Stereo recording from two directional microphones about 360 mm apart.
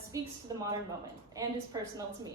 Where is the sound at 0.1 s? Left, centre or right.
Centre.